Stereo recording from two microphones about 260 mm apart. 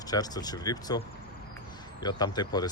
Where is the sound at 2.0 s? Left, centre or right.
Centre.